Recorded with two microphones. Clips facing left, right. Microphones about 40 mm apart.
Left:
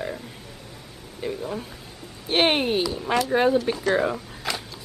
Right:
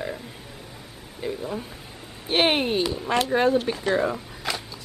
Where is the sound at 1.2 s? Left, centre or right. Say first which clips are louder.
Even; centre.